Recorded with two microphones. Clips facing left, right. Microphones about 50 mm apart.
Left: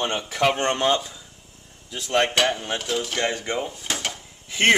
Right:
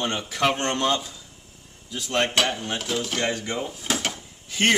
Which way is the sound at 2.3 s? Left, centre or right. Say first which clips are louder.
Left 2 dB; centre.